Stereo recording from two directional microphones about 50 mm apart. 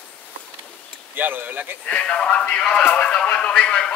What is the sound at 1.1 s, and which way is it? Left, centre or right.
Speech, right.